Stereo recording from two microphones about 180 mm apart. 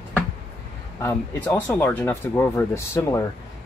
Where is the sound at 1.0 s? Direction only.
15° left (ahead or behind).